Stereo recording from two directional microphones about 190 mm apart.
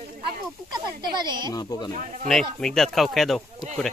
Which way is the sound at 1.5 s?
20° left (ahead or behind).